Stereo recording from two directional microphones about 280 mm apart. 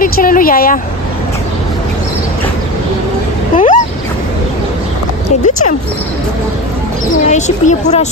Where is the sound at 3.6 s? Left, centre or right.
Left.